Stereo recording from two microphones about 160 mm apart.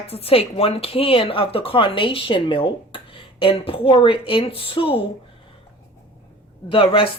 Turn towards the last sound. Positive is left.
turn(degrees=35)  # may be behind; listen again after turning